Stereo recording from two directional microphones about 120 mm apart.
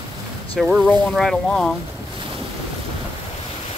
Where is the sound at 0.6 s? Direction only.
Centre (ahead or behind).